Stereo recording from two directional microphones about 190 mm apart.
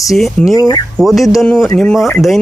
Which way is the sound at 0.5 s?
20° left (ahead or behind).